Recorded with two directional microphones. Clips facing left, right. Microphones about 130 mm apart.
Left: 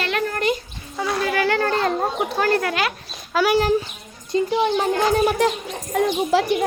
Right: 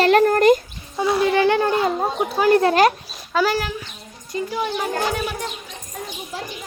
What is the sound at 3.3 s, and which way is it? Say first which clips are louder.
Speech: even; 5° left (ahead or behind).